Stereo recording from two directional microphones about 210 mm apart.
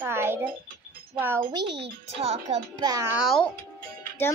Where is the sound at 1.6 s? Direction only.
55° right (ahead or behind).